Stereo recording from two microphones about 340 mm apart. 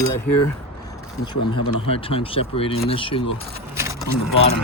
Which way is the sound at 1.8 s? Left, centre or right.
Centre.